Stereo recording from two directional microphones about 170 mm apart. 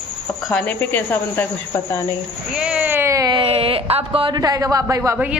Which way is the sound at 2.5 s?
5° right (ahead or behind).